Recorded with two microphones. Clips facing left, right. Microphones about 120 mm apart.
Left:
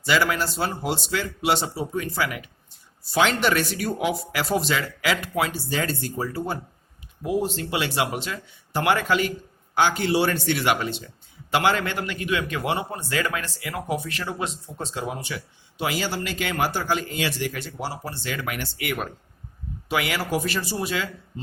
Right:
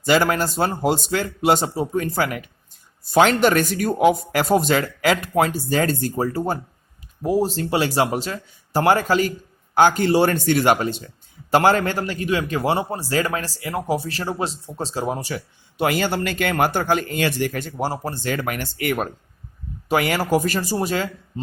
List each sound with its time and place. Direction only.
0.0 s a man's voice: 45° right (ahead or behind)
15.8 s speech: 55° right (ahead or behind)